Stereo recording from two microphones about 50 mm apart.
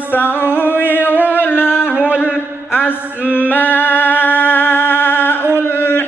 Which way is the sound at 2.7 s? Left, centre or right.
Left.